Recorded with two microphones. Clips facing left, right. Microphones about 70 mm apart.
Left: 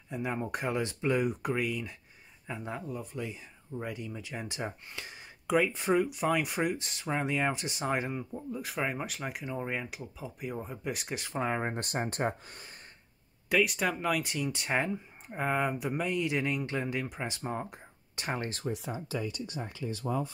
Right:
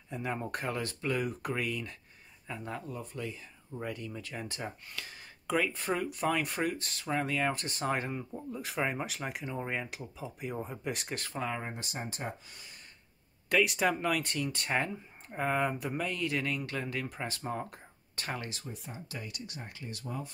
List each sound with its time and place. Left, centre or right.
0.1 s speech: centre
11.3 s speech: left
13.5 s speech: centre
18.4 s speech: left